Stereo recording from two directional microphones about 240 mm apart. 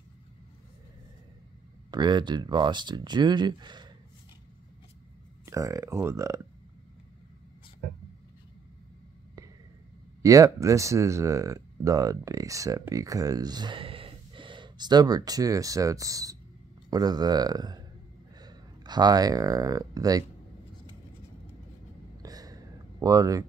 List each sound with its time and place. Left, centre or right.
1.9 s speech: centre
5.4 s speech: centre
10.2 s speech: centre
22.2 s a sound: centre